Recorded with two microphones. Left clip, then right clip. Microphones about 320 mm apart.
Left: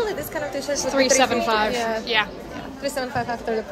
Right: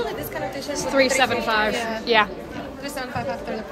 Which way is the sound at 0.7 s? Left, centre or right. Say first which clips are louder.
Even; centre.